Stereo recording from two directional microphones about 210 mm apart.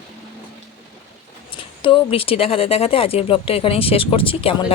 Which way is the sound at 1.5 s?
25° left (ahead or behind).